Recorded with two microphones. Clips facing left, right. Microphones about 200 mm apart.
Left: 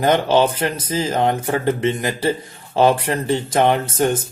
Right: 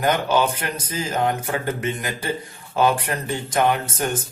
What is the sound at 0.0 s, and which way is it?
Speech, 25° left (ahead or behind).